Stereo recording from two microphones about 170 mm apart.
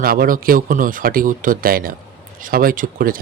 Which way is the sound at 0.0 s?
60° right (ahead or behind).